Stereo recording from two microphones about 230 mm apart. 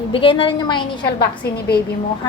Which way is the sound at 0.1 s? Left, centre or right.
Left.